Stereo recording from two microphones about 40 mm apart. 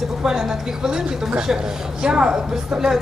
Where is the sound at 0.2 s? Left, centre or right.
Centre.